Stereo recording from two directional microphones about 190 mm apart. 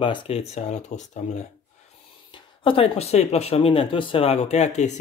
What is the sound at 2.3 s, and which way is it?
Speech, 30° left (ahead or behind).